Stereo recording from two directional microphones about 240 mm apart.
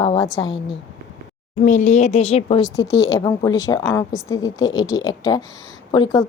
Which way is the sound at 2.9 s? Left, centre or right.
Left.